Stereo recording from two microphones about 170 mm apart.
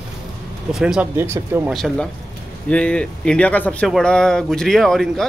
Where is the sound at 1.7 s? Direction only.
5° left (ahead or behind).